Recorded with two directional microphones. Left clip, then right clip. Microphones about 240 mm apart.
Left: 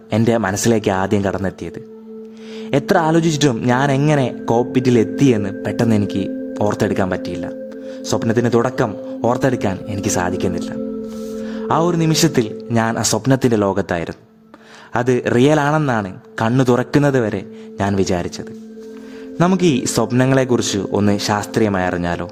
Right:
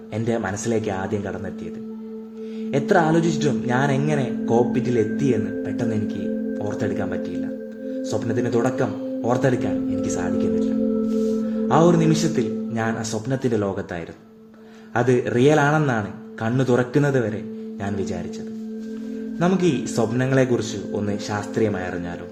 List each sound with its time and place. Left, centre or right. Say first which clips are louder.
0.1 s speech: left 8 dB; left
2.6 s speech: left 3 dB; left
11.7 s speech: left 1 dB; left
19.4 s speech: left 5 dB; left